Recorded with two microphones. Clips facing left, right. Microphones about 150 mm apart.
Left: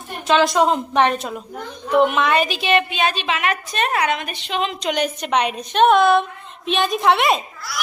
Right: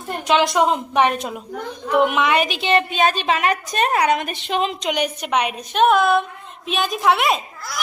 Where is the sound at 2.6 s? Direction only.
35° right (ahead or behind); by 4.5 s 50° right (ahead or behind).